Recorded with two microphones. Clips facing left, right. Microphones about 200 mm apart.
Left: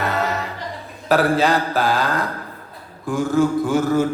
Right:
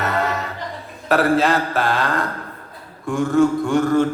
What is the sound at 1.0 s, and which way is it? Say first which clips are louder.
A man's voice: even; centre (ahead or behind).